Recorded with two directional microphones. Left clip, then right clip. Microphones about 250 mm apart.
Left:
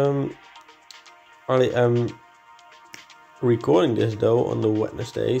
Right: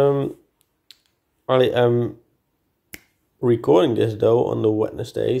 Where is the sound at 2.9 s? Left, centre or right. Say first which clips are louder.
Right 2 dB; right.